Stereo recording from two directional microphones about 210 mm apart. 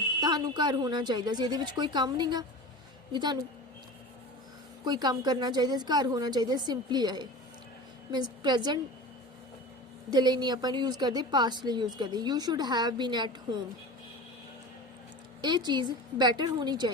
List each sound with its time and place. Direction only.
0.2 s a woman's voice: 20° right (ahead or behind)
4.9 s a woman's voice: 20° right (ahead or behind)
10.1 s a woman's voice: 20° right (ahead or behind)
15.4 s a woman's voice: 20° right (ahead or behind)